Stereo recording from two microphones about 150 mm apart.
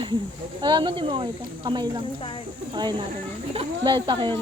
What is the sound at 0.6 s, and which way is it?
A woman's voice, 30° right (ahead or behind).